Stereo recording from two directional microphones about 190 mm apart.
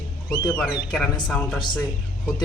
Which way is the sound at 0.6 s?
Centre (ahead or behind).